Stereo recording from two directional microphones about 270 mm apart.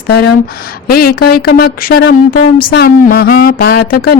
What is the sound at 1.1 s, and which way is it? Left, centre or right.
Speech, left.